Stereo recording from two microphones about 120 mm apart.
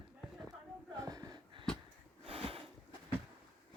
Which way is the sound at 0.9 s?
30° right (ahead or behind).